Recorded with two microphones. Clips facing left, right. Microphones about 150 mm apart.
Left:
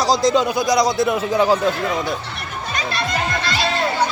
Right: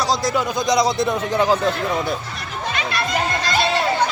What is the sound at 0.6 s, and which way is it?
Speech, centre (ahead or behind).